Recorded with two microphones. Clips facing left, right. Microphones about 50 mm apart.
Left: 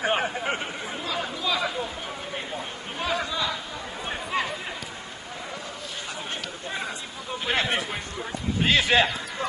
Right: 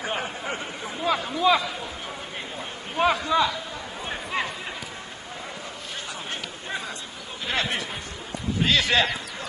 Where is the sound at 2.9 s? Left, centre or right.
Right.